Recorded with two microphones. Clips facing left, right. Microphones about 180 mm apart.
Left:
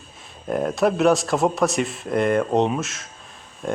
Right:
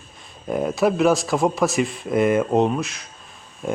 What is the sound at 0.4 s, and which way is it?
Speech, centre (ahead or behind).